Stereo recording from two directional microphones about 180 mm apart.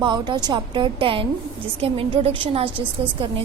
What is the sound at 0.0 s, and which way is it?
A woman's voice, 25° right (ahead or behind).